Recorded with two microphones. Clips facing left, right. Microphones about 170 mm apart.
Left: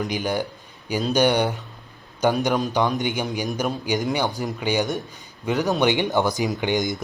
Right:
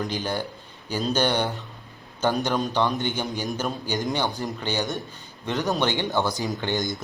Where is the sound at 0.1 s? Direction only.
15° left (ahead or behind).